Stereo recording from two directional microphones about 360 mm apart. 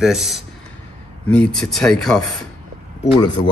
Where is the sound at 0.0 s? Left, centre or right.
Centre.